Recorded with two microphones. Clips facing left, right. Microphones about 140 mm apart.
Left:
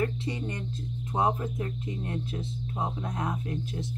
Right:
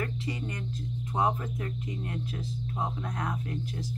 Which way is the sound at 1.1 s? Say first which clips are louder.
Left 2 dB; 25° left (ahead or behind).